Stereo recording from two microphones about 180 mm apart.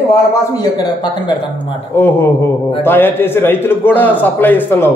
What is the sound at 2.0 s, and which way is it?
A man's voice, 10° left (ahead or behind).